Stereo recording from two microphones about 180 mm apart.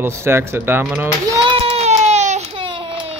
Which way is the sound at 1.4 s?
35° right (ahead or behind).